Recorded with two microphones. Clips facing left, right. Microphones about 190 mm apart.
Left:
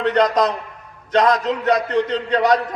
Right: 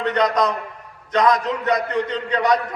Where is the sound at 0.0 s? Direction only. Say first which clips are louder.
Left 3 dB; 30° left (ahead or behind).